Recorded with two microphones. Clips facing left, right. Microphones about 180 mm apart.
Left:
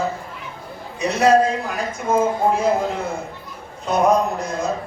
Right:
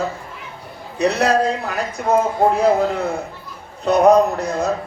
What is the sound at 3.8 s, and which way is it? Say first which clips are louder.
Speech: right 5 dB; 65° right (ahead or behind).